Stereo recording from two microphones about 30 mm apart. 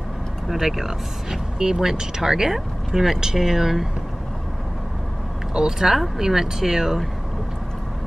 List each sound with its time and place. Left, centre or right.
0.5 s speech: centre
5.5 s speech: centre